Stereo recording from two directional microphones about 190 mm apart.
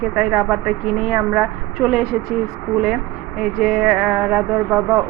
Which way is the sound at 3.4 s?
5° right (ahead or behind).